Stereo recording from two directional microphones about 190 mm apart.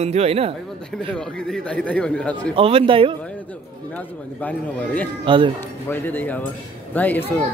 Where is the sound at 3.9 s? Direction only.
10° left (ahead or behind).